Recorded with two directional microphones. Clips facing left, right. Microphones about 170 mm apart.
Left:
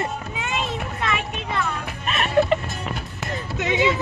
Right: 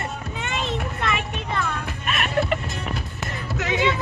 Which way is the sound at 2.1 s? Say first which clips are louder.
Left 4 dB; 30° left (ahead or behind).